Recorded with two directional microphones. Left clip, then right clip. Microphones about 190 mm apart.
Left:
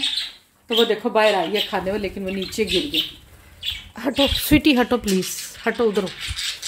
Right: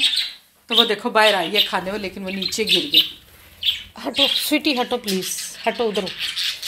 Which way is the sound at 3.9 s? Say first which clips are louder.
Left 1 dB; 35° left (ahead or behind).